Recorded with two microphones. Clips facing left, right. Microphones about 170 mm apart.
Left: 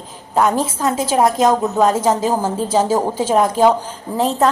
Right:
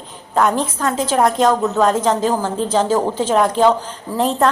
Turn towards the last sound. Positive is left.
turn(degrees=0)  # may be behind; listen again after turning